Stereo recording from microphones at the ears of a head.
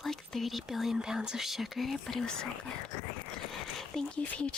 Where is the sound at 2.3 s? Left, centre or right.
Left.